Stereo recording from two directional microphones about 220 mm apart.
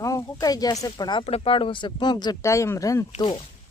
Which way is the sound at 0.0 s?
15° left (ahead or behind).